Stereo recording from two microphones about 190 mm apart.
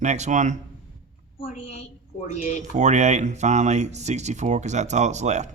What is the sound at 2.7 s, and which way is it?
A man's voice, 40° right (ahead or behind).